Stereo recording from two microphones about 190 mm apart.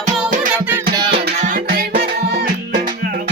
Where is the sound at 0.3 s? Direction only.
45° right (ahead or behind).